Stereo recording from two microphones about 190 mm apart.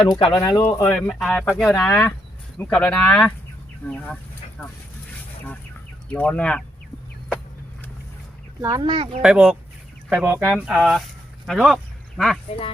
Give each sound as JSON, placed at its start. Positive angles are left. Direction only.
{"t": 0.1, "sound": "speech", "side_deg": 25}
{"t": 0.9, "sound": "speech", "side_deg": 5}
{"t": 6.1, "sound": "speech", "side_deg": 10}
{"t": 8.6, "sound": "speech", "side_deg": -20}
{"t": 9.2, "sound": "speech", "side_deg": -5}
{"t": 10.5, "sound": "speech", "side_deg": 0}